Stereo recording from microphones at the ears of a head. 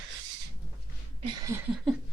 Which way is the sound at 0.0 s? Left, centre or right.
Right.